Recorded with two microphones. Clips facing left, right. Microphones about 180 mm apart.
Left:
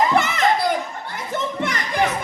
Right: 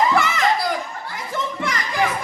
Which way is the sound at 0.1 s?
20° left (ahead or behind).